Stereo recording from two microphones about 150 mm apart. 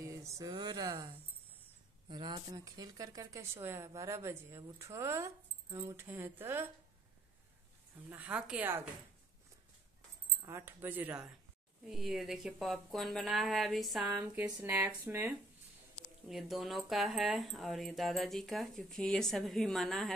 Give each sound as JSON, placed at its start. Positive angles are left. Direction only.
{"t": 0.0, "sound": "a sound", "side_deg": -20}
{"t": 2.0, "sound": "a woman's voice", "side_deg": -30}
{"t": 8.1, "sound": "speech", "side_deg": -10}
{"t": 10.4, "sound": "speech", "side_deg": -15}
{"t": 16.3, "sound": "speech", "side_deg": 0}